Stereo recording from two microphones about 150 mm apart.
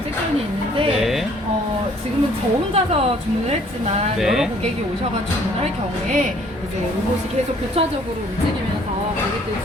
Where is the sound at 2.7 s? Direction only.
40° right (ahead or behind).